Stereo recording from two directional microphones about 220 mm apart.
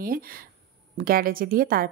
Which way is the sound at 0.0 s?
40° right (ahead or behind).